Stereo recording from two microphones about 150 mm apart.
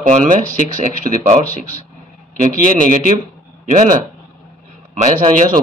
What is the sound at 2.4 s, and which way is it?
Speech, 60° right (ahead or behind).